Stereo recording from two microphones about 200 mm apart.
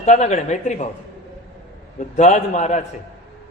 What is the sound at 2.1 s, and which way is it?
Speech, 35° left (ahead or behind).